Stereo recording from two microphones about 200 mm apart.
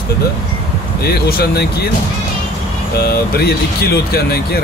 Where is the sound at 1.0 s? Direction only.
55° left (ahead or behind).